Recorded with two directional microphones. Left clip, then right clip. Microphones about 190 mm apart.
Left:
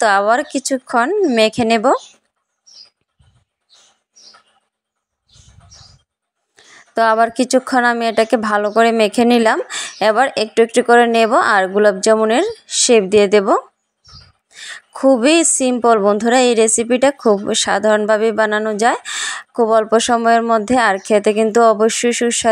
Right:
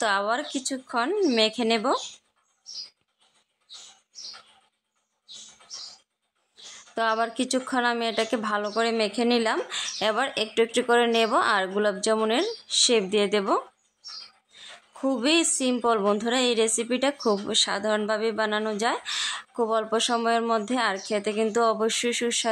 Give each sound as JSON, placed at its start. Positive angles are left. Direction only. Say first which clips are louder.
{"t": 0.0, "sound": "speech", "louder": "left 12 dB", "side_deg": 35}
{"t": 6.5, "sound": "a woman's voice", "louder": "left 12 dB", "side_deg": 30}